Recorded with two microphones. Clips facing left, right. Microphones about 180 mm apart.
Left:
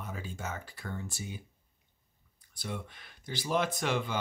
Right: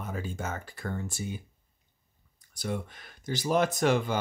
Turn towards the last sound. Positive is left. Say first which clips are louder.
# right 6 dB
turn(degrees=-45)  # may be behind; listen again after turning